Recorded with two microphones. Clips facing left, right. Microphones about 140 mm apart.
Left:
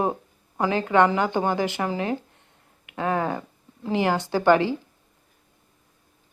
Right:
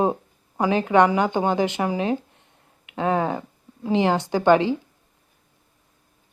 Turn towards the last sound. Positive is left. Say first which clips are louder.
# right 2 dB
turn(degrees=-20)  # may be behind; listen again after turning